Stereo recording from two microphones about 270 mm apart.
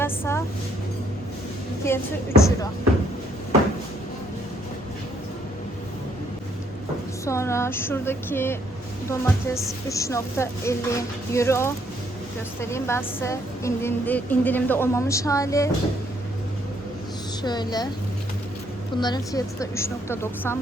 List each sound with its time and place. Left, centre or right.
0.0 s a woman's voice: centre
1.8 s a woman's voice: centre
7.3 s a woman's voice: centre
17.4 s a woman's voice: centre
18.9 s a woman's voice: centre